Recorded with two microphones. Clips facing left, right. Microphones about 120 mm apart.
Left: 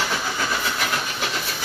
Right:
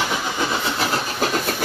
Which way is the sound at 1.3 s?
50° right (ahead or behind).